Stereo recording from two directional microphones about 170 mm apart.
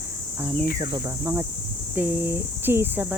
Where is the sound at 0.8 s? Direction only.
20° right (ahead or behind).